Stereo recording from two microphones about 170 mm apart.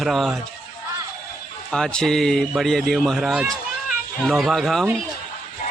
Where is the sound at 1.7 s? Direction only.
5° left (ahead or behind).